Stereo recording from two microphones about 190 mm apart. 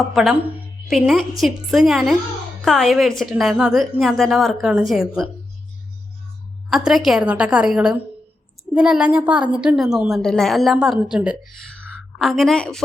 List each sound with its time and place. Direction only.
0.0 s a woman's voice: centre (ahead or behind)
6.7 s a woman's voice: centre (ahead or behind)